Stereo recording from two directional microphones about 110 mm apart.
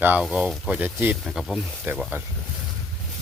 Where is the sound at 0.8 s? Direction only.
15° right (ahead or behind).